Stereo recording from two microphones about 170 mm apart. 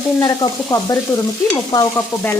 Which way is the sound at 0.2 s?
20° left (ahead or behind).